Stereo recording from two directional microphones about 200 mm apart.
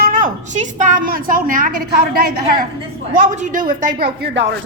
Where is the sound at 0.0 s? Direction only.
45° right (ahead or behind).